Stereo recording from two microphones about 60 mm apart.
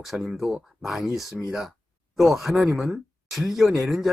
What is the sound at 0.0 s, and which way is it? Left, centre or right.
Speech, centre.